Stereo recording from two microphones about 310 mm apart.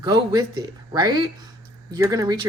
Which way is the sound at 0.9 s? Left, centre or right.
Centre.